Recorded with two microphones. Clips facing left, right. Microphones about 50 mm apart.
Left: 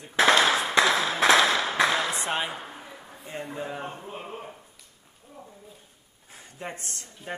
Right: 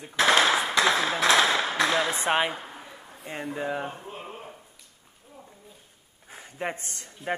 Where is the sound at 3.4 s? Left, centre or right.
Centre.